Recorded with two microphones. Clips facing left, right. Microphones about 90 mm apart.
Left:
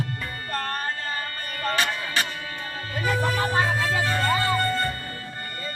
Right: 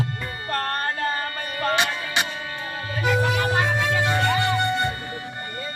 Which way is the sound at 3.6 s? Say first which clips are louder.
Right 2 dB; 20° right (ahead or behind).